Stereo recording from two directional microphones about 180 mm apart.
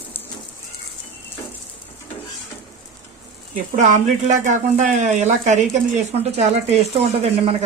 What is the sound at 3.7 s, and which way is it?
Speech, 45° right (ahead or behind).